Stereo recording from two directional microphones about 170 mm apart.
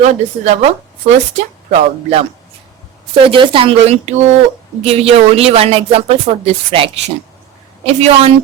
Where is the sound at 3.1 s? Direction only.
30° right (ahead or behind).